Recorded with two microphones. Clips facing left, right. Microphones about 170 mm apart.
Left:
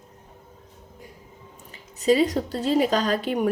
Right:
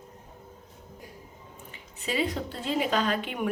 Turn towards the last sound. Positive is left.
turn(degrees=35)  # may be behind; listen again after turning